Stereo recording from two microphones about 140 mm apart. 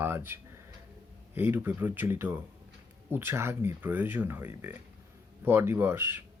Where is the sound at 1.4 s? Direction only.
15° right (ahead or behind).